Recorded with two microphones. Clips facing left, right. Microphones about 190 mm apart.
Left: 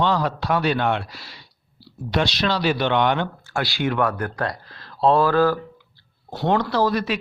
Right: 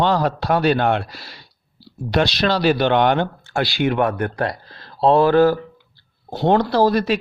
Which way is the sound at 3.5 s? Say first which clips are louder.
Right 4 dB; 20° right (ahead or behind).